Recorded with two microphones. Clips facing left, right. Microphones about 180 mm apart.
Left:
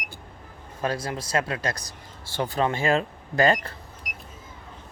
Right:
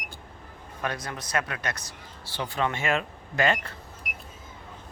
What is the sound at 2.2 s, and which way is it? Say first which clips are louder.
Speech: left 4 dB; 45° left (ahead or behind).